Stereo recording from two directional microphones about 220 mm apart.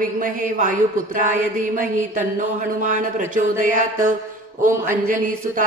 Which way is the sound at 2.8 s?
35° right (ahead or behind).